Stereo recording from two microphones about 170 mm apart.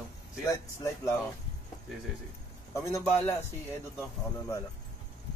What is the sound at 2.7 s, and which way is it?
Speech, 15° left (ahead or behind).